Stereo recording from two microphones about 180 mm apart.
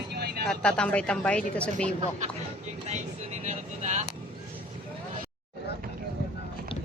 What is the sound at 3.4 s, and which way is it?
Vehicle, 40° right (ahead or behind).